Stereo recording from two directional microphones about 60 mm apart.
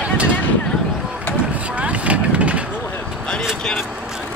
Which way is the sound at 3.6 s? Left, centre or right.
Centre.